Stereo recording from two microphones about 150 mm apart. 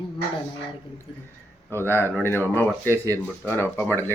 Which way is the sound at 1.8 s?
15° left (ahead or behind).